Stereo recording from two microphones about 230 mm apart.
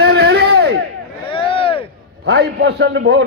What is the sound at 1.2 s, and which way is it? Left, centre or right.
Vehicle, left.